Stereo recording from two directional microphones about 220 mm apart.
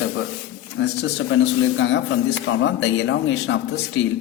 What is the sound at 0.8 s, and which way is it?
Speech, 55° left (ahead or behind).